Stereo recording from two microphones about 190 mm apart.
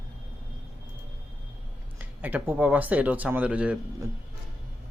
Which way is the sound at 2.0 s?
10° right (ahead or behind).